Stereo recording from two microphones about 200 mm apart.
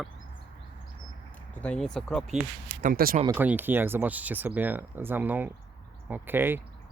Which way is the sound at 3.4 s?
10° right (ahead or behind).